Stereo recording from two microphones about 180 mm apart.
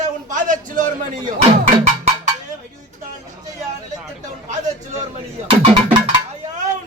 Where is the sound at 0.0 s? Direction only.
45° right (ahead or behind).